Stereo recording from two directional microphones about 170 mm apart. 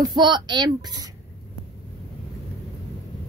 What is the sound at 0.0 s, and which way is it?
Speech, 25° right (ahead or behind).